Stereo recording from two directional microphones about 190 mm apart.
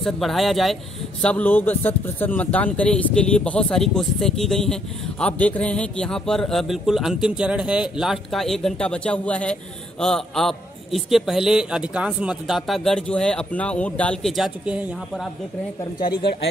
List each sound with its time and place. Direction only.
0.0 s a man's voice: centre (ahead or behind)
16.0 s speech: 25° left (ahead or behind)